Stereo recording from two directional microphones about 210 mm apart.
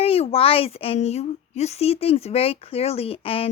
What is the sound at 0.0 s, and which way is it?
A woman's voice, 25° left (ahead or behind).